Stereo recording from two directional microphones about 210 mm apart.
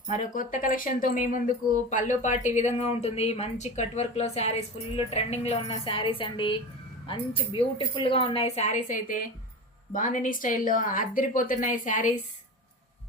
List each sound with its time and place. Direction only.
0.1 s speech: 40° left (ahead or behind)